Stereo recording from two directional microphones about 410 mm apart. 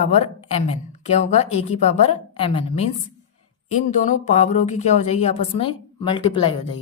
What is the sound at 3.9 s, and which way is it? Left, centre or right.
A woman's voice, centre.